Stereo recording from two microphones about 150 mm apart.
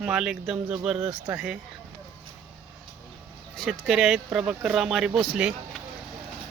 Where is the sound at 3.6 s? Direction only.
Centre (ahead or behind).